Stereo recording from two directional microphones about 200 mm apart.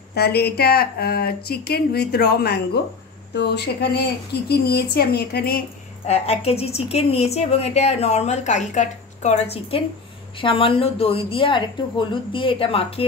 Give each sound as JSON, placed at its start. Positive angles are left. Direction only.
{"t": 0.1, "sound": "a woman's voice", "side_deg": 55}
{"t": 6.0, "sound": "a woman's voice", "side_deg": 35}